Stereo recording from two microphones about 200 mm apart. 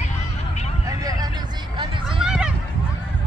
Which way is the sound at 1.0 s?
20° right (ahead or behind).